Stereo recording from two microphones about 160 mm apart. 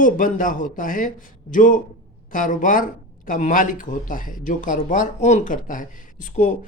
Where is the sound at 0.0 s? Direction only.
55° left (ahead or behind).